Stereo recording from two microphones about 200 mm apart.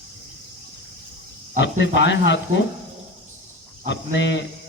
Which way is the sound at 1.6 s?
65° left (ahead or behind).